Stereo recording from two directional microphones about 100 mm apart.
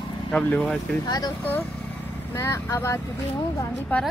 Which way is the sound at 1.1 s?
40° left (ahead or behind).